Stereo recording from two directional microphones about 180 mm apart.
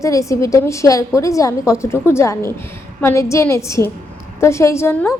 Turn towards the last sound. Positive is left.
turn(degrees=15)  # may be behind; listen again after turning